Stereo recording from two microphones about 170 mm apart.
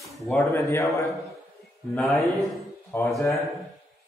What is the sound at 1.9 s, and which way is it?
Speech, centre (ahead or behind).